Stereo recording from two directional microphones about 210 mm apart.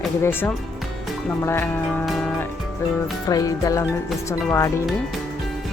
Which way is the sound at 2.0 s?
Centre (ahead or behind).